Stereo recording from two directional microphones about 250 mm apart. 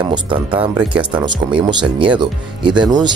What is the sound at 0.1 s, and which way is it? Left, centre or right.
Speech, centre.